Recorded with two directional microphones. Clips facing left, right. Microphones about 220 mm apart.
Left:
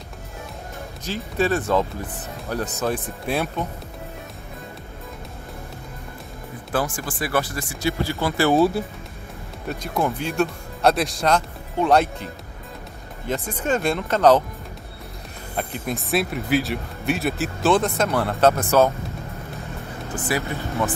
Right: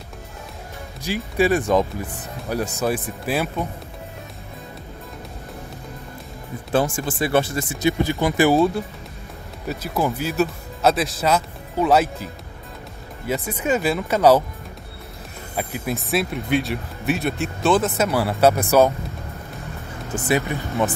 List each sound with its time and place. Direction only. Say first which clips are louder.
1.0 s speech: right 3 dB; 10° right (ahead or behind)
6.7 s speech: right 4 dB; 25° right (ahead or behind)
8.5 s speech: even; centre (ahead or behind)
13.5 s speech: right 1 dB; 10° right (ahead or behind)
15.5 s speech: right 1 dB; 5° right (ahead or behind)
20.2 s speech: right 4 dB; 20° right (ahead or behind)